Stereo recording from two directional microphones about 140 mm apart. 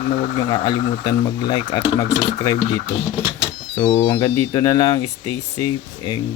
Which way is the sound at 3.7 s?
40° left (ahead or behind).